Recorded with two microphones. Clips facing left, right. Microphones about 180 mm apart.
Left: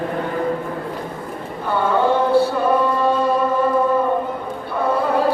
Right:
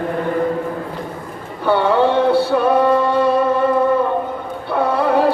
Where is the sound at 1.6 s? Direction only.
75° right (ahead or behind).